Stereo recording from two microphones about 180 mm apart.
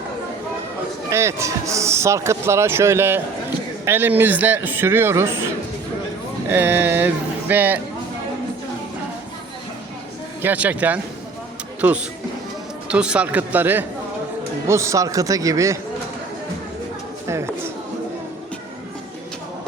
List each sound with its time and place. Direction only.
1.1 s speech: 15° right (ahead or behind)
6.5 s speech: 10° right (ahead or behind)
10.4 s speech: 10° right (ahead or behind)